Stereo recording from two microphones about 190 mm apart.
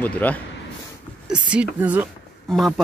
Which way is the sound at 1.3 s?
5° right (ahead or behind).